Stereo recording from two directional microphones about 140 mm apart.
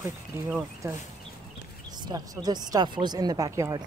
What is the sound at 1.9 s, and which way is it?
Speech, 30° right (ahead or behind).